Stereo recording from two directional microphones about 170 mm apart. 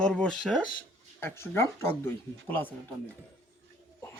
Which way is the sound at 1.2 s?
15° left (ahead or behind).